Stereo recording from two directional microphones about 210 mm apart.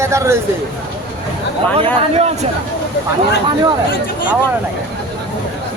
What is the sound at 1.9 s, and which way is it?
Speech, 30° right (ahead or behind).